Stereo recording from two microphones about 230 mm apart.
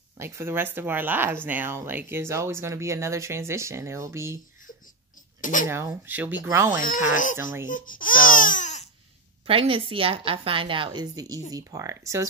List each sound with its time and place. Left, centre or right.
0.2 s speech: centre
5.4 s speech: left
5.7 s speech: centre
7.1 s speech: left
7.7 s baby cry: left
9.5 s a woman's voice: right